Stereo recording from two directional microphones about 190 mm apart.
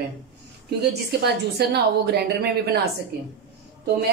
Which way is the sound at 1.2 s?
60° right (ahead or behind).